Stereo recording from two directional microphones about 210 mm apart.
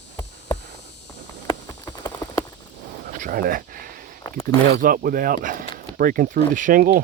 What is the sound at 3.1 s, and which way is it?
Speech, 40° right (ahead or behind).